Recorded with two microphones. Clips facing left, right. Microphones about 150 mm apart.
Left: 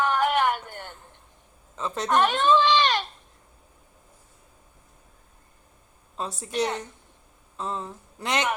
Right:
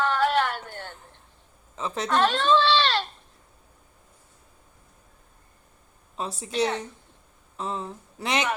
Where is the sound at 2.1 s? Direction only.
15° left (ahead or behind).